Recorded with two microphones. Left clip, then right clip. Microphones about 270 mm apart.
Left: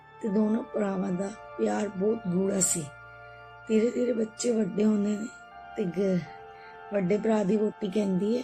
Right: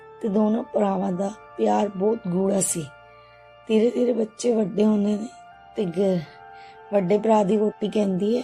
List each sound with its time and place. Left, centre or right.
0.2 s speech: right